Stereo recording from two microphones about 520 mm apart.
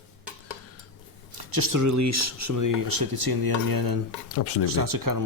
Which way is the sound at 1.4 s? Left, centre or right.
Right.